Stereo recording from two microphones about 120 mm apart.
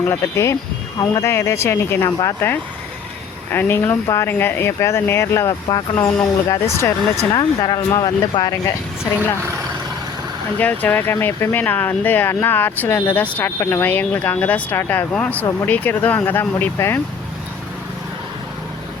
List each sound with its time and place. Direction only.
0.0 s speech: 20° left (ahead or behind)
2.0 s speech: 35° left (ahead or behind)
3.5 s speech: 15° left (ahead or behind)
5.6 s speech: 35° left (ahead or behind)
6.5 s speech: 25° left (ahead or behind)
7.3 s speech: 35° left (ahead or behind)
10.6 s speech: 15° left (ahead or behind)